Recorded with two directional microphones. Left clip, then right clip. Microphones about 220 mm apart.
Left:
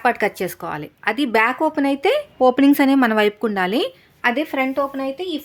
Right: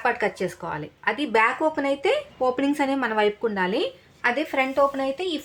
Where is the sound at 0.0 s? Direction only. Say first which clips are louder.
Left 5 dB; 45° left (ahead or behind).